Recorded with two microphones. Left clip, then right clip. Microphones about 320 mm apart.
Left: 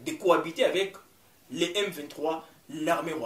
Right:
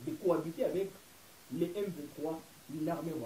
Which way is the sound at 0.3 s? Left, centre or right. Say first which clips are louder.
Left 9 dB; centre.